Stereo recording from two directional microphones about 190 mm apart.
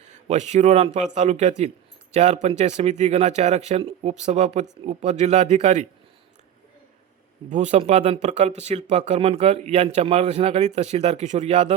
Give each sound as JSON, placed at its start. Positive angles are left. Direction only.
{"t": 0.0, "sound": "a man's voice", "side_deg": -40}
{"t": 7.5, "sound": "speech", "side_deg": -40}